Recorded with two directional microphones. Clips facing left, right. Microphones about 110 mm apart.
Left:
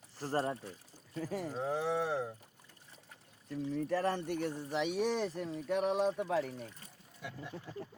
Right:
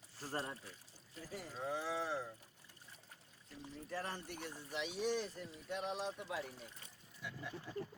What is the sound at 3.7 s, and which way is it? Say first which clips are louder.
Speech: left 11 dB; 65° left (ahead or behind).